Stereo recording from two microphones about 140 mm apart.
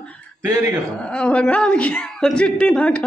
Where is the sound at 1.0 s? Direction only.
5° left (ahead or behind).